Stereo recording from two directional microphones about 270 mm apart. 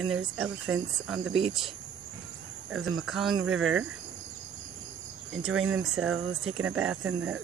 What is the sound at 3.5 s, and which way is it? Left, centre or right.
Speech, right.